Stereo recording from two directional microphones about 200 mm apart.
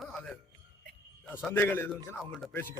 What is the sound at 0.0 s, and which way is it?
Music, 5° left (ahead or behind).